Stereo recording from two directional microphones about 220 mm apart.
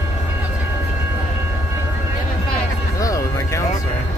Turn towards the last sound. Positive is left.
turn(degrees=15)  # may be behind; listen again after turning